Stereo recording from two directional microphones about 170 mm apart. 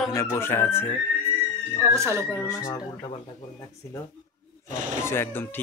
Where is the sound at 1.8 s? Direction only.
15° right (ahead or behind).